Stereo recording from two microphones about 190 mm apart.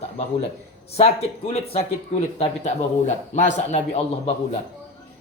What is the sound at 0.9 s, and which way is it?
A man's voice, 35° left (ahead or behind).